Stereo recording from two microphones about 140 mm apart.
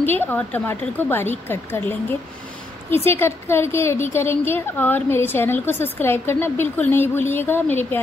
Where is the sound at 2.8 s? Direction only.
15° left (ahead or behind).